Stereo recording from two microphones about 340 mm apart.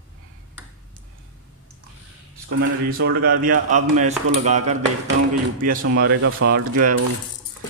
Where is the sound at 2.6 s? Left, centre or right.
Right.